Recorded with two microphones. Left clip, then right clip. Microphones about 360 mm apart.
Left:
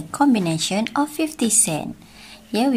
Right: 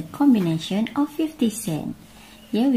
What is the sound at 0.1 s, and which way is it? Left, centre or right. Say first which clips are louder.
A woman's voice: left 1 dB; left.